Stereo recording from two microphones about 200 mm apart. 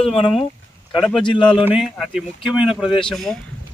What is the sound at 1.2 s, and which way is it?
Speech, 25° left (ahead or behind).